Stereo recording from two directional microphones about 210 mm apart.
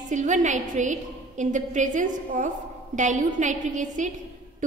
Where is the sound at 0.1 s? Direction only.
35° right (ahead or behind).